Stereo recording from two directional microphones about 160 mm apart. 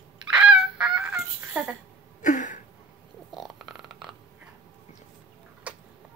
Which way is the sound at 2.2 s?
55° left (ahead or behind).